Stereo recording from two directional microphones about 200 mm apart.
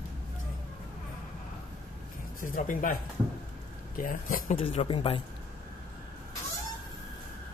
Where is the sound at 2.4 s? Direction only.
40° left (ahead or behind).